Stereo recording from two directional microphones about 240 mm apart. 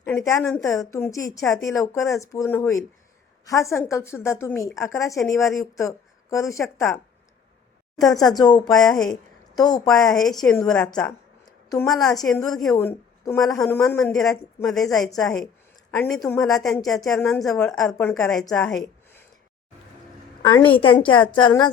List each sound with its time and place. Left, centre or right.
0.0 s a woman's voice: centre
8.2 s a woman's voice: centre
8.7 s a woman's voice: centre
9.6 s a woman's voice: centre
9.9 s a woman's voice: centre
11.4 s a sound: centre
12.2 s a woman's voice: centre
16.9 s a woman's voice: centre
17.2 s a woman's voice: centre
18.4 s a sound: centre
20.4 s a woman's voice: centre
20.7 s a woman's voice: left